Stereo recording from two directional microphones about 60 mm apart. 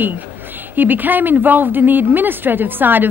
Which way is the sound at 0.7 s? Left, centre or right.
Right.